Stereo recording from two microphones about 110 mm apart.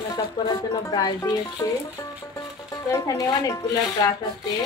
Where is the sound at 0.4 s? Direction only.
40° left (ahead or behind).